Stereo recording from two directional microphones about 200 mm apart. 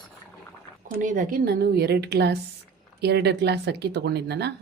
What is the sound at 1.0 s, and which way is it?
Speech, 40° right (ahead or behind).